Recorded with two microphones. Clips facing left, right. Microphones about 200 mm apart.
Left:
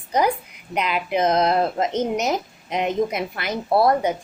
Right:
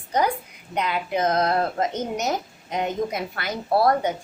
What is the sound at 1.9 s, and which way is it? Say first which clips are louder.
Speech: left 5 dB; 90° left.